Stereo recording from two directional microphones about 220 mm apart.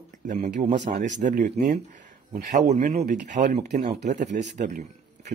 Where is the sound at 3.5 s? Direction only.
25° right (ahead or behind).